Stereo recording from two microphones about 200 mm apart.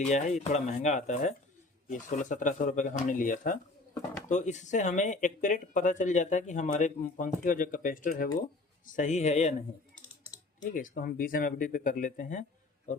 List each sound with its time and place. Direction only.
0.0 s speech: 35° left (ahead or behind)